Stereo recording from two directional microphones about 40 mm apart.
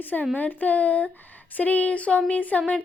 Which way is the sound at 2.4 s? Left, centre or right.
Left.